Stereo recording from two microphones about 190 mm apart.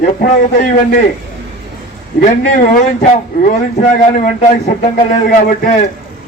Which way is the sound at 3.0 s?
40° left (ahead or behind).